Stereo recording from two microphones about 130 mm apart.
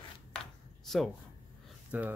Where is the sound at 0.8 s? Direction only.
5° left (ahead or behind).